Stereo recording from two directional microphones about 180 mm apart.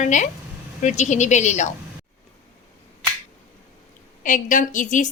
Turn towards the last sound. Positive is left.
turn(degrees=45)  # may be behind; listen again after turning